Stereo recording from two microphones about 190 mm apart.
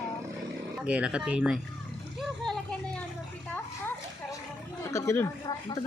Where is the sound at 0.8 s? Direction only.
5° right (ahead or behind).